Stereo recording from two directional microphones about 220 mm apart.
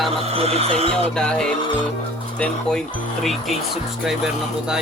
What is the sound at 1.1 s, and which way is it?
Speech, 5° left (ahead or behind).